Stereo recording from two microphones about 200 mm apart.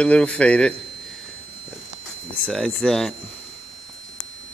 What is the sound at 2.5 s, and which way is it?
Speech, centre (ahead or behind).